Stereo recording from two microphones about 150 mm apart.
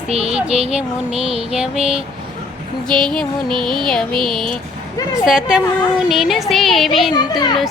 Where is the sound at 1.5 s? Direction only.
5° right (ahead or behind).